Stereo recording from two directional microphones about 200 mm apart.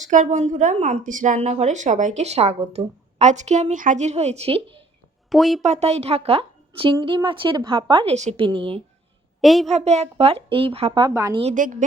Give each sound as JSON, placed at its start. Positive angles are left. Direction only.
{"t": 0.0, "sound": "speech", "side_deg": -40}
{"t": 5.3, "sound": "speech", "side_deg": 0}
{"t": 5.6, "sound": "a woman's voice", "side_deg": -35}
{"t": 9.4, "sound": "speech", "side_deg": 0}
{"t": 9.7, "sound": "a woman's voice", "side_deg": -35}
{"t": 11.3, "sound": "speech", "side_deg": -35}